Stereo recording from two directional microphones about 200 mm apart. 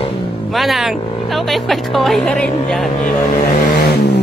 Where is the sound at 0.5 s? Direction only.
Centre (ahead or behind).